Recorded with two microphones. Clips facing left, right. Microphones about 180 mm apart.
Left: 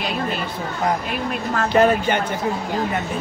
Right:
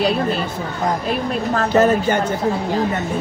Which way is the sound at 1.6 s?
45° right (ahead or behind).